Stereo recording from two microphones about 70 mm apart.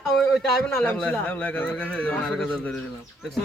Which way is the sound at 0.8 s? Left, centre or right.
Centre.